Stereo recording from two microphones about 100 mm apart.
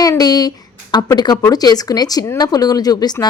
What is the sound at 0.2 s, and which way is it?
A woman's voice, 40° left (ahead or behind).